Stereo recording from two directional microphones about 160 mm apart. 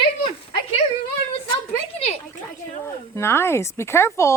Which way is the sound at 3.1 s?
15° left (ahead or behind).